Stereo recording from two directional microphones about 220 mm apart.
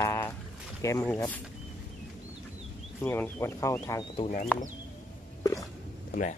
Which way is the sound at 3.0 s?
10° left (ahead or behind).